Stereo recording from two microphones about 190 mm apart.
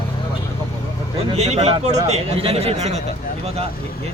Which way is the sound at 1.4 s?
35° right (ahead or behind).